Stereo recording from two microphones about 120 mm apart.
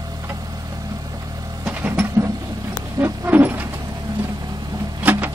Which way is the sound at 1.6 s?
15° right (ahead or behind).